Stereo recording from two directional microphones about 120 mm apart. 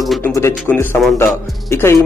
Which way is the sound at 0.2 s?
20° left (ahead or behind).